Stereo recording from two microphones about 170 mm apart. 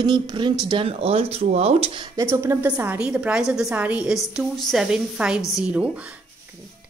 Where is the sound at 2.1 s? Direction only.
15° right (ahead or behind).